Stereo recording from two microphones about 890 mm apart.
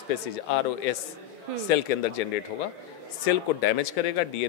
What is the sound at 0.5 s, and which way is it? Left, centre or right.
A man's voice, left.